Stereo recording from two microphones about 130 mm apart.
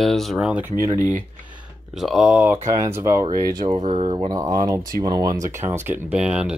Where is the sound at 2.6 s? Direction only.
25° right (ahead or behind).